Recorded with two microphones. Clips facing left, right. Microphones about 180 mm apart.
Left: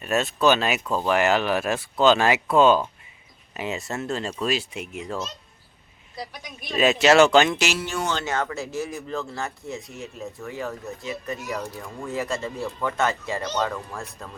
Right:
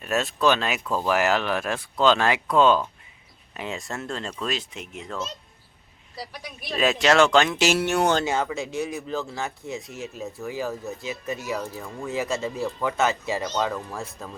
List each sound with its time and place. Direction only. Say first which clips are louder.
0.0 s speech: left 2 dB; centre (ahead or behind)
6.1 s speech: left 1 dB; 5° right (ahead or behind)
7.7 s speech: right 6 dB; 65° right (ahead or behind)
8.2 s speech: right 2 dB; 10° right (ahead or behind)
8.5 s speech: right 1 dB; centre (ahead or behind)